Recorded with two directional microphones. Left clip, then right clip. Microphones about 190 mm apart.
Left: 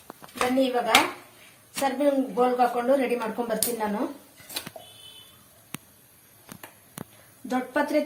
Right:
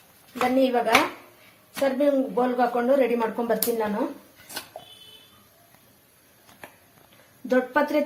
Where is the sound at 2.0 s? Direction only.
25° right (ahead or behind).